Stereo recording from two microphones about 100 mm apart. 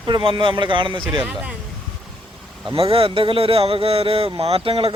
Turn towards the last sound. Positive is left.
turn(degrees=-65)  # may be behind; listen again after turning